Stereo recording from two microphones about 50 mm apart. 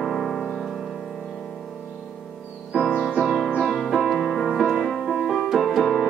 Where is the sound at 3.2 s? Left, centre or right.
Centre.